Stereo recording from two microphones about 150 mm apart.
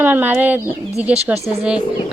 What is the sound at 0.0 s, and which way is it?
Speech, 10° right (ahead or behind).